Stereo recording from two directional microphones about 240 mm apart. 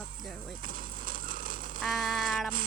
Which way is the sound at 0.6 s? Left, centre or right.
Right.